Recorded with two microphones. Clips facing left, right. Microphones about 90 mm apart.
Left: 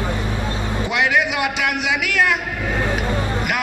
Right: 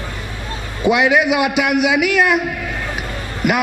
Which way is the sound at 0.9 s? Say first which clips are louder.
Right 6 dB; 15° right (ahead or behind).